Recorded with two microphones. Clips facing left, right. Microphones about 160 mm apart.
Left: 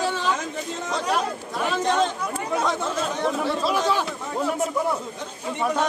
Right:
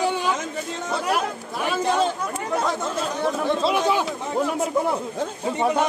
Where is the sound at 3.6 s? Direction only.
20° right (ahead or behind).